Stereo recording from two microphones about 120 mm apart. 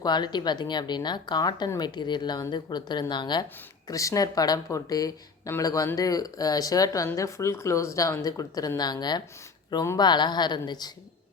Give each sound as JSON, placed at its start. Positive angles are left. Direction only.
{"t": 0.0, "sound": "speech", "side_deg": 35}
{"t": 3.8, "sound": "speech", "side_deg": 25}